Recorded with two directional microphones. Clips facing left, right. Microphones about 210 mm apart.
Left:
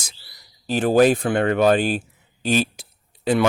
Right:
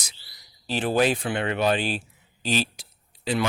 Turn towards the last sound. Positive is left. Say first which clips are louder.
# left 7 dB
turn(degrees=50)  # may be behind; listen again after turning